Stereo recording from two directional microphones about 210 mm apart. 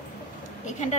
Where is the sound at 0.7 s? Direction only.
35° left (ahead or behind).